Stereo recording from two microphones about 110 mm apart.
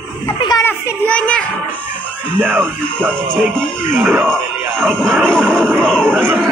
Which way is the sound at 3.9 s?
20° right (ahead or behind).